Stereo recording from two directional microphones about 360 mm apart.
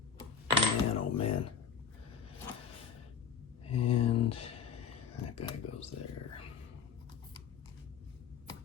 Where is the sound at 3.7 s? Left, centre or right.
Centre.